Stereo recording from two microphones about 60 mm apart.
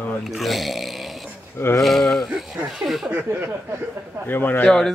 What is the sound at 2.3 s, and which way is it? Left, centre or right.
Speech, centre.